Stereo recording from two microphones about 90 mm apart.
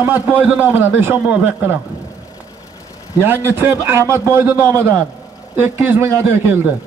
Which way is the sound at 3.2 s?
25° right (ahead or behind).